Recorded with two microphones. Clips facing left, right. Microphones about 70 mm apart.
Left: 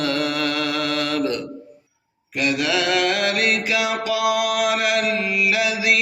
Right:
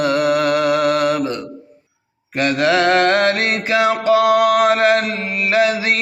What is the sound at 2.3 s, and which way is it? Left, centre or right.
Mantra, right.